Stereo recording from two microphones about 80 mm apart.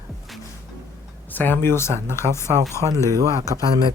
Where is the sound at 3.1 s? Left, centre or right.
Right.